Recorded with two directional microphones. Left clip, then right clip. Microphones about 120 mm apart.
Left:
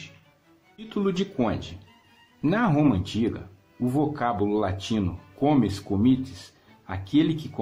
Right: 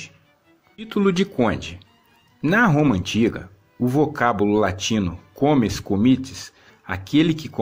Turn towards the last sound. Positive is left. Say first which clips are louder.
# right 4 dB
turn(degrees=-20)  # may be behind; listen again after turning